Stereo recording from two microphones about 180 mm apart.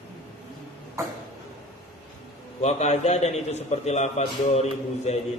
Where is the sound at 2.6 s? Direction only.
40° left (ahead or behind).